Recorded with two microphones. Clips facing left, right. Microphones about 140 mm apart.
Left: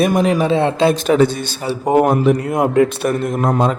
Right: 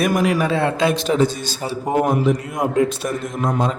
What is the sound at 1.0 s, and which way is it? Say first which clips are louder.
A man's voice: left 4 dB; 60° left (ahead or behind).